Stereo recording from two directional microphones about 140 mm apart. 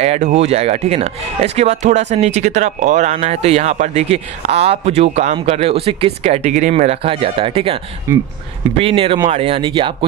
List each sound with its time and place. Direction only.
0.0 s speech: 50° right (ahead or behind)
8.1 s speech: 20° right (ahead or behind)
8.7 s speech: 40° right (ahead or behind)